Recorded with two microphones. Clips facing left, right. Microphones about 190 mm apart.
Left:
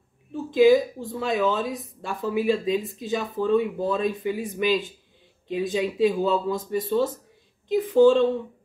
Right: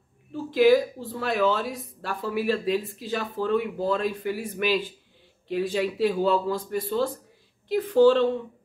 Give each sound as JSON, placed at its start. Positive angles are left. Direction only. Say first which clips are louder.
{"t": 0.3, "sound": "speech", "louder": "left 2 dB", "side_deg": 15}